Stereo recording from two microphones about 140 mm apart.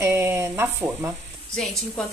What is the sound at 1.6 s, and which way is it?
Speech, centre (ahead or behind).